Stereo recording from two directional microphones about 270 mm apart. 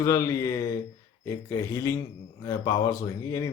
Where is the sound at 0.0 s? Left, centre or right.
Centre.